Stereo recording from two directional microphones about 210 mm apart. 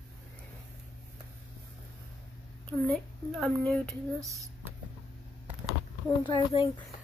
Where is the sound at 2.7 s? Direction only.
5° left (ahead or behind).